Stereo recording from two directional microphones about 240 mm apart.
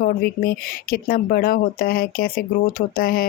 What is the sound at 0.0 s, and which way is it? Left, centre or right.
Speech, left.